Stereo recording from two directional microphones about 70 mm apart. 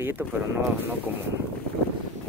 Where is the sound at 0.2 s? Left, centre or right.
Right.